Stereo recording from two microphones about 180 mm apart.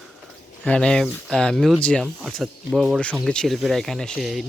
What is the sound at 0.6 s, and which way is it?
Speech, 5° left (ahead or behind).